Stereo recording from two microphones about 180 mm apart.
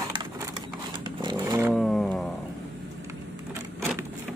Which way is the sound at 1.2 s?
25° right (ahead or behind).